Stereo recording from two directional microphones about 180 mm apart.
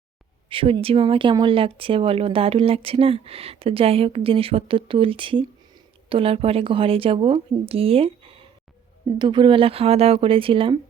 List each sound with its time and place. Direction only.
0.5 s speech: 30° right (ahead or behind)